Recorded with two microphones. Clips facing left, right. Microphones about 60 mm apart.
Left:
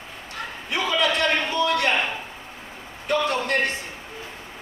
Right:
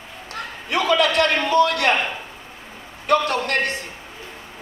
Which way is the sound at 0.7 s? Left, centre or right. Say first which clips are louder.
Right 4 dB; right.